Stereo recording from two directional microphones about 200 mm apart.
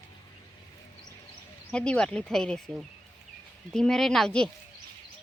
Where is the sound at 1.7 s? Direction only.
5° left (ahead or behind).